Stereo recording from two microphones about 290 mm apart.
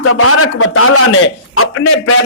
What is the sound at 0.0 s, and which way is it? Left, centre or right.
Speech, left.